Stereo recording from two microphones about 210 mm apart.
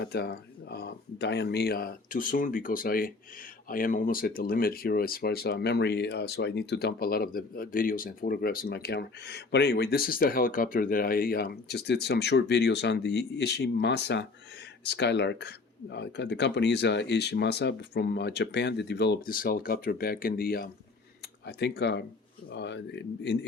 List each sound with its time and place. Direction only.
0.0 s speech: 50° left (ahead or behind)